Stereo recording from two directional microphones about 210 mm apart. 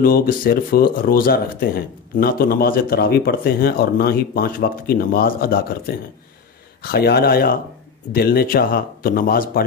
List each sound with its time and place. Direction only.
0.0 s speech: 45° left (ahead or behind)
6.8 s speech: 50° left (ahead or behind)